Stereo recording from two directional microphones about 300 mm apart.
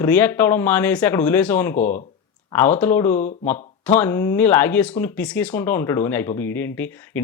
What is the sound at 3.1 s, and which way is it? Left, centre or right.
Speech, left.